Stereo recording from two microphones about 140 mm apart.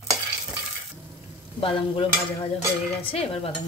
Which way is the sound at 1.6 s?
40° left (ahead or behind).